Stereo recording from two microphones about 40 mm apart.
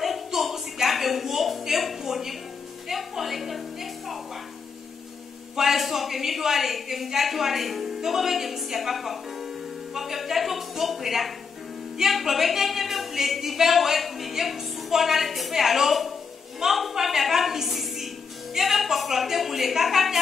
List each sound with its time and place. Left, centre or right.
0.0 s a sound: centre
2.9 s speech: centre
5.6 s a woman's voice: centre